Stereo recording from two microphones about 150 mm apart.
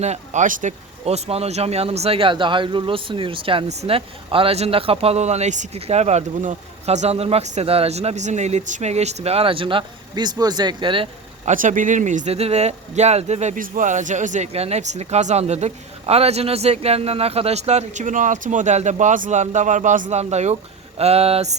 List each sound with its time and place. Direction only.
0.0 s speech: 50° right (ahead or behind)
1.0 s speech: 45° right (ahead or behind)
11.4 s speech: 60° right (ahead or behind); by 21.5 s 40° right (ahead or behind)